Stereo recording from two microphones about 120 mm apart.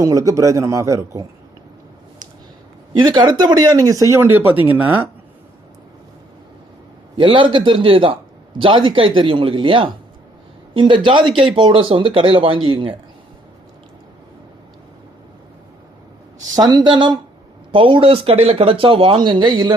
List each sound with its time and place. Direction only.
0.0 s a man's voice: 25° right (ahead or behind)
2.9 s speech: 35° right (ahead or behind)
4.2 s speech: 15° right (ahead or behind)
7.2 s speech: 45° right (ahead or behind)
16.6 s speech: 35° right (ahead or behind)